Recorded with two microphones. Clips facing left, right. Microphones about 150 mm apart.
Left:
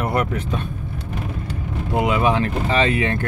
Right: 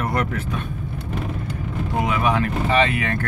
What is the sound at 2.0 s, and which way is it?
Speech, 25° left (ahead or behind).